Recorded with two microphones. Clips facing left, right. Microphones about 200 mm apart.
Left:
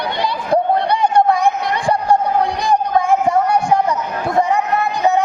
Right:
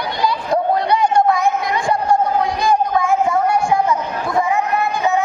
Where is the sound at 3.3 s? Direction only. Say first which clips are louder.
Left 2 dB; 35° left (ahead or behind).